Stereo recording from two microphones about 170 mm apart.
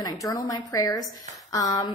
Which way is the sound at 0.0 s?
20° left (ahead or behind).